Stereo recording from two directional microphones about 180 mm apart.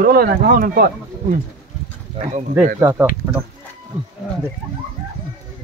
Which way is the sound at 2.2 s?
35° right (ahead or behind).